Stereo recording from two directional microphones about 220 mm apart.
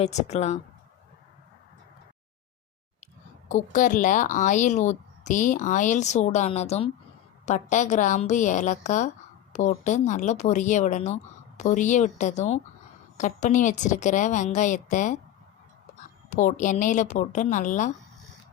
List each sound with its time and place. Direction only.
0.0 s a woman's voice: 30° left (ahead or behind)
3.5 s a woman's voice: 35° left (ahead or behind)
16.3 s a woman's voice: 35° left (ahead or behind)